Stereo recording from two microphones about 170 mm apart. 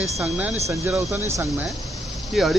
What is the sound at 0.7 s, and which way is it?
Speech, 15° right (ahead or behind).